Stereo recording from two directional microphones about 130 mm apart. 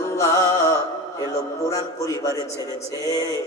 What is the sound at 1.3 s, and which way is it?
A man's voice, 25° left (ahead or behind).